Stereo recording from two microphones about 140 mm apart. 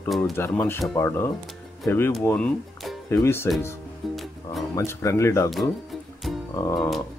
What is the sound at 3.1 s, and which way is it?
Speech, 15° left (ahead or behind).